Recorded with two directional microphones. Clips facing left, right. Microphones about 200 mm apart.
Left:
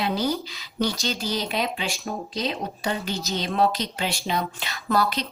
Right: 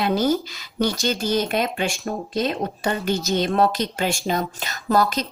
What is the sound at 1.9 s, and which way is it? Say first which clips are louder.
Speech: right 4 dB; centre (ahead or behind).